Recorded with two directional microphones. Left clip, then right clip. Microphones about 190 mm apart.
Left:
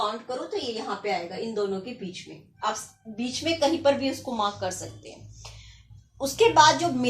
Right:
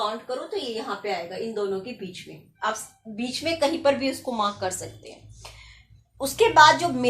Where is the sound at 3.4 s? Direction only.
15° right (ahead or behind).